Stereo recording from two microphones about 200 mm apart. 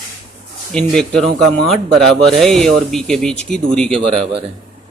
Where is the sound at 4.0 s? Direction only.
30° right (ahead or behind).